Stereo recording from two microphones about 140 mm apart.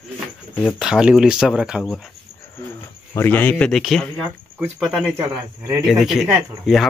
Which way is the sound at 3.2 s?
15° left (ahead or behind).